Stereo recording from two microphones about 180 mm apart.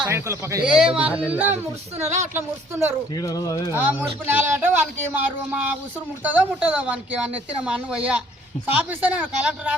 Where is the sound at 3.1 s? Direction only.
20° left (ahead or behind).